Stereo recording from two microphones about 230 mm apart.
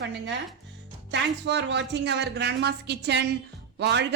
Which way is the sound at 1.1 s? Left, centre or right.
Right.